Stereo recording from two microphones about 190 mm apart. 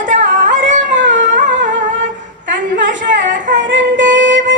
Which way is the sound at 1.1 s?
40° right (ahead or behind).